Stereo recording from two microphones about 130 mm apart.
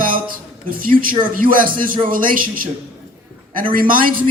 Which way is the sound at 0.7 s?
90° right.